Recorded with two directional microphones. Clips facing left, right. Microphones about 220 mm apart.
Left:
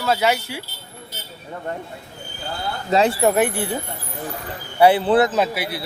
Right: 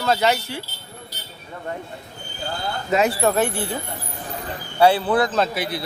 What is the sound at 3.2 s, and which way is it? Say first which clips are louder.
Speech: left 2 dB; 15° left (ahead or behind).